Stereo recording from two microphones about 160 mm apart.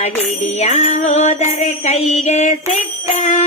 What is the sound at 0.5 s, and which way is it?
Music, 45° left (ahead or behind).